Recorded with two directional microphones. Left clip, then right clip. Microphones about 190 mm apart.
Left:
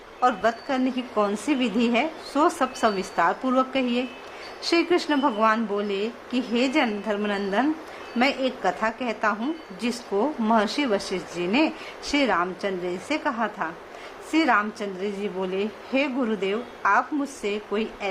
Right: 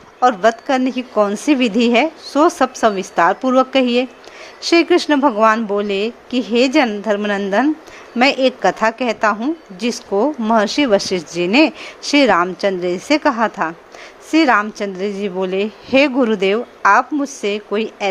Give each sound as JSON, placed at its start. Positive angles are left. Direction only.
{"t": 0.2, "sound": "a woman's voice", "side_deg": -35}